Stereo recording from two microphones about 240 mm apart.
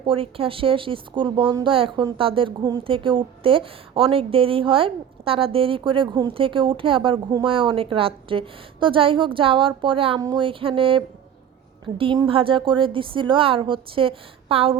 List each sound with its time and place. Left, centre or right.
0.0 s speech: right